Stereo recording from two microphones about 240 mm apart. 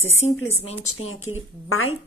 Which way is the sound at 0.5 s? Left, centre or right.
Left.